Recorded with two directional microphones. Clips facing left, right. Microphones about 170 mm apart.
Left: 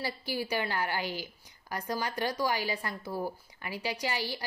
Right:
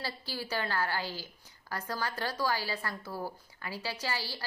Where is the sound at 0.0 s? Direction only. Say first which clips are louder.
Left 5 dB; 15° left (ahead or behind).